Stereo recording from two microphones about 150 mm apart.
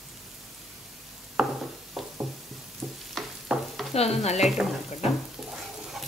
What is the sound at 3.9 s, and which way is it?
Stir, 45° left (ahead or behind).